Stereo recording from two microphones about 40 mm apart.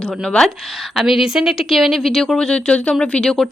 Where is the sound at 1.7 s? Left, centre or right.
Centre.